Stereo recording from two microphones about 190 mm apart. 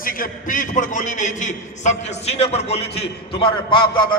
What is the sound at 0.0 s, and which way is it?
A man's voice, 45° left (ahead or behind).